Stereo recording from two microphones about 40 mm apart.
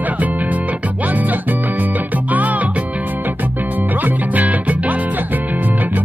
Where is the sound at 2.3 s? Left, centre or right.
Right.